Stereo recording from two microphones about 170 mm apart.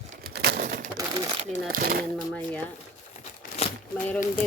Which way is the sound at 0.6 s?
50° right (ahead or behind).